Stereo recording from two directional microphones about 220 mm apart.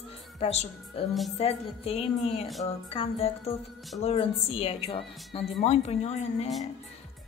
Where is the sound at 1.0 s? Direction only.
30° left (ahead or behind).